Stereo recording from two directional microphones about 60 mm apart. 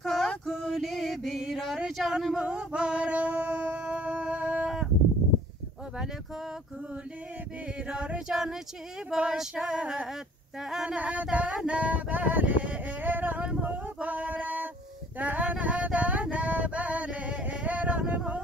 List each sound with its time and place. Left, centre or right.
0.0 s female singing: centre
0.5 s music: centre
7.9 s female singing: centre
11.0 s a sound: right